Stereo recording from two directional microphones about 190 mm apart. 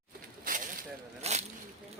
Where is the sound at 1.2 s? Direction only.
35° right (ahead or behind).